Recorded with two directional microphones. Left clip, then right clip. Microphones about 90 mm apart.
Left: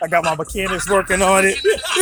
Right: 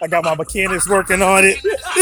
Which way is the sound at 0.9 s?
60° right (ahead or behind).